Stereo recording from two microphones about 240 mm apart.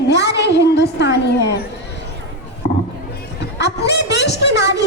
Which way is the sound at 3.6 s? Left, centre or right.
Left.